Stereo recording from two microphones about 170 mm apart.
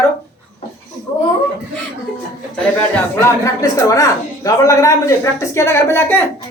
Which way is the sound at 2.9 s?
15° left (ahead or behind).